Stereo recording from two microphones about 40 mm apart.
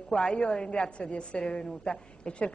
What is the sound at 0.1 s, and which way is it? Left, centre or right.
A woman's voice, left.